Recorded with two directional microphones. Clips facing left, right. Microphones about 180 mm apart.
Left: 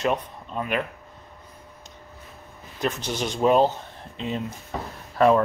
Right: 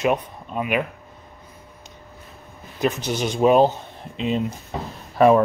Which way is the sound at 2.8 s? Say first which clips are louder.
Right 4 dB; 15° right (ahead or behind).